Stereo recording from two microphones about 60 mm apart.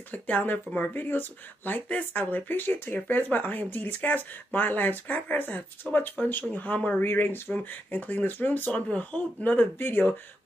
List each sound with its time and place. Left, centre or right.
0.1 s speech: left
7.0 s speech: left